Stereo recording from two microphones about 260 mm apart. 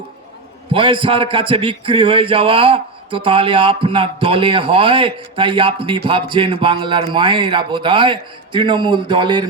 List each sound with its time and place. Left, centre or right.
0.7 s a man's voice: centre